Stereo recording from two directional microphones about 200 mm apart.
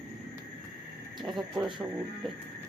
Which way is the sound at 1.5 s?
20° right (ahead or behind).